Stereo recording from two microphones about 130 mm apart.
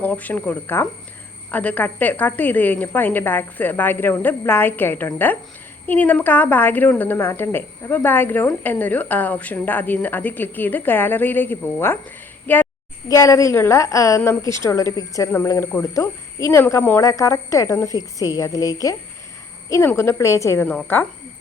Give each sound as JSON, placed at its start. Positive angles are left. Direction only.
{"t": 0.0, "sound": "a woman's voice", "side_deg": 15}
{"t": 13.1, "sound": "a woman's voice", "side_deg": 25}